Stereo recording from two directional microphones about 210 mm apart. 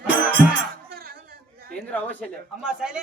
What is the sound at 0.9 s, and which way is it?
Chatter, 45° right (ahead or behind).